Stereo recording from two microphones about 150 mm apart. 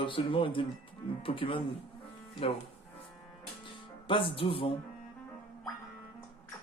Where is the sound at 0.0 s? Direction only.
35° left (ahead or behind).